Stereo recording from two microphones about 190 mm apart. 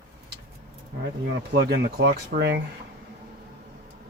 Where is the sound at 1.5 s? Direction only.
60° right (ahead or behind).